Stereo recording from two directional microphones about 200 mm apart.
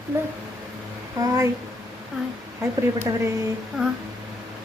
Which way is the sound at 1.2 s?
15° right (ahead or behind).